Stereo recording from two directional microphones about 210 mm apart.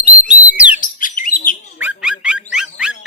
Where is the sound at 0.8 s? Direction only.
40° left (ahead or behind).